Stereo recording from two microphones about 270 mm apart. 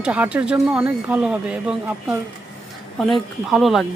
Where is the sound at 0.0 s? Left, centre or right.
Centre.